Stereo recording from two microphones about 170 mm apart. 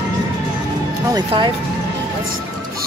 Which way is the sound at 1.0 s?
25° right (ahead or behind).